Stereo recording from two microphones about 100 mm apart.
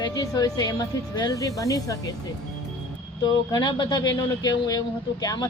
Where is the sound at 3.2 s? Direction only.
45° left (ahead or behind).